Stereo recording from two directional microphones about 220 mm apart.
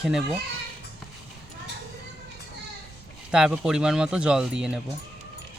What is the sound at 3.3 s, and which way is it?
Speech, 5° right (ahead or behind).